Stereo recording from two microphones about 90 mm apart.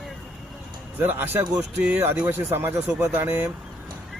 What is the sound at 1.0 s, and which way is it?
Speech, 20° right (ahead or behind).